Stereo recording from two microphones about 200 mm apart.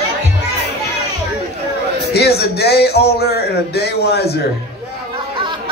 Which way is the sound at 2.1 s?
55° left (ahead or behind).